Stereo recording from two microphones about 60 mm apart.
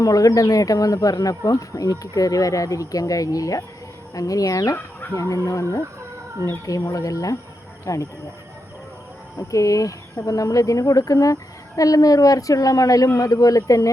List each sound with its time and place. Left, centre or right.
0.0 s speech: left
5.3 s speech: left
6.7 s speech: left
9.4 s speech: left